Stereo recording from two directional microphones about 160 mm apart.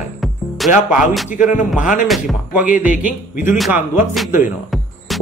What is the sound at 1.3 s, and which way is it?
Speech, 55° left (ahead or behind).